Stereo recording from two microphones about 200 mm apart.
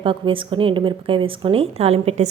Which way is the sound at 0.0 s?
25° right (ahead or behind).